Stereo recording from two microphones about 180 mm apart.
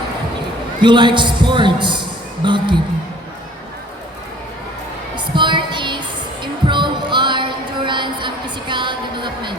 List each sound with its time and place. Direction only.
0.8 s a man's voice: 25° right (ahead or behind)
5.1 s music: 25° right (ahead or behind)